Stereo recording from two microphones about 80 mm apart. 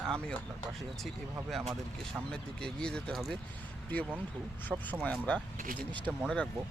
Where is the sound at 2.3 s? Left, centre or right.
Centre.